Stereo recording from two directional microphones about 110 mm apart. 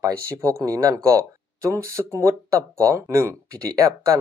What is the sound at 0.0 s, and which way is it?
Speech, 30° right (ahead or behind).